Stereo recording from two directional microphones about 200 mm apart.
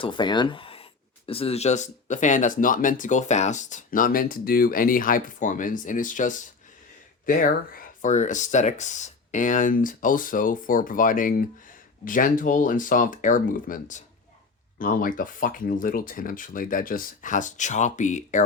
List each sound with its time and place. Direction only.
0.0 s speech: 25° left (ahead or behind)